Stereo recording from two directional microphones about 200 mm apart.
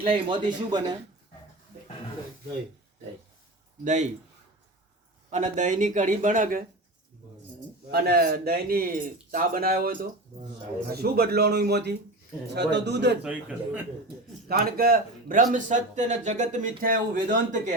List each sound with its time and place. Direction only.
0.0 s speech: 25° right (ahead or behind)
3.8 s speech: 35° right (ahead or behind)
5.3 s speech: 40° right (ahead or behind)
7.9 s a man's voice: 50° right (ahead or behind)
13.2 s a man's voice: 5° right (ahead or behind)
14.4 s speech: 50° right (ahead or behind)